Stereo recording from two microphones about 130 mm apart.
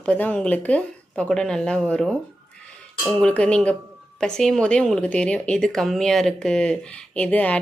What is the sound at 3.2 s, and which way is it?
Speech, 10° left (ahead or behind).